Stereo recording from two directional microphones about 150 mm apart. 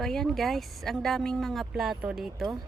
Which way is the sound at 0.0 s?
5° left (ahead or behind).